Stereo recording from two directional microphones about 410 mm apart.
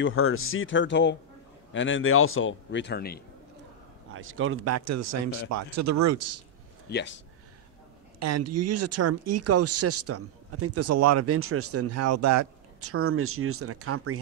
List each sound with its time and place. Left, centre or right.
0.0 s a man's voice: left
4.1 s speech: right
6.9 s a man's voice: left
8.2 s speech: right